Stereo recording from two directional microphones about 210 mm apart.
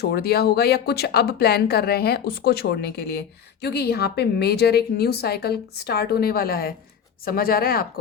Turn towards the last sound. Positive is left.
turn(degrees=45)  # may be behind; listen again after turning